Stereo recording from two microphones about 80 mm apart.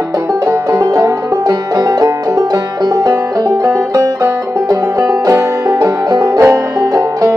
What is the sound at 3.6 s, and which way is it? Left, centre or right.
Music, right.